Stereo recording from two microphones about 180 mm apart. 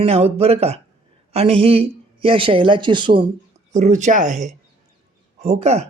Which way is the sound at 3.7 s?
40° right (ahead or behind).